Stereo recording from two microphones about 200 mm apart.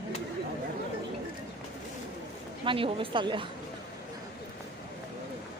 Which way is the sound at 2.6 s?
25° right (ahead or behind).